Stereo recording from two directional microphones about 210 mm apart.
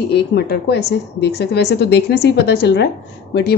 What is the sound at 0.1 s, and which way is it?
A woman's voice, 50° left (ahead or behind).